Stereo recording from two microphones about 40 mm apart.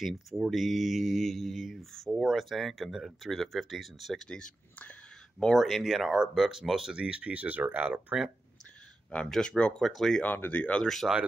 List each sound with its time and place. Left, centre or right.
0.0 s speech: centre
4.2 s speech: centre
5.4 s speech: centre
6.9 s speech: right
8.1 s speech: centre
9.4 s speech: left
9.8 s speech: centre
10.2 s speech: left
10.8 s speech: centre